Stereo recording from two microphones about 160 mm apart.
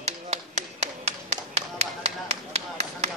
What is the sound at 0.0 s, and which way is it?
Tap, 45° right (ahead or behind).